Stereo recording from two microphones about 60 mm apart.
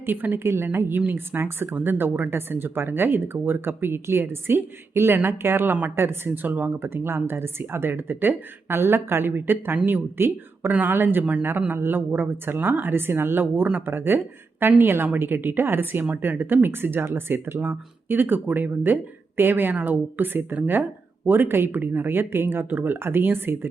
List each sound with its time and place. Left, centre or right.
0.0 s a woman's voice: right
0.4 s a woman's voice: right